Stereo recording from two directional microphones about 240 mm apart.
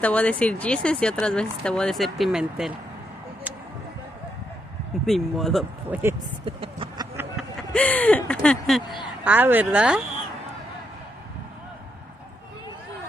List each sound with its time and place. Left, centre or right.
0.0 s speech: centre
5.0 s speech: centre
6.4 s speech: right
7.7 s speech: centre